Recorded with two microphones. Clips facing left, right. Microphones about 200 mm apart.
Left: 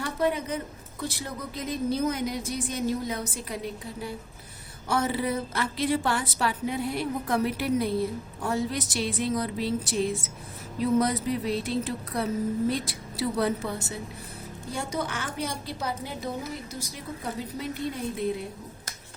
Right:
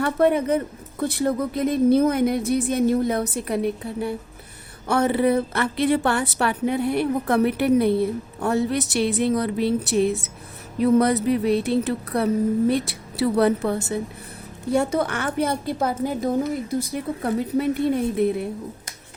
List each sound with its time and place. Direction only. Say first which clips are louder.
0.0 s a woman's voice: right 8 dB; 60° right (ahead or behind)